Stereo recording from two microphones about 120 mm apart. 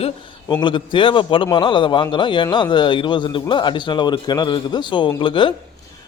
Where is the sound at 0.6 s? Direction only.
45° left (ahead or behind).